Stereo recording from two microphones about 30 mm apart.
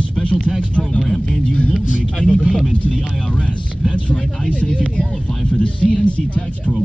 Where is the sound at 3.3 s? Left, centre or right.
Left.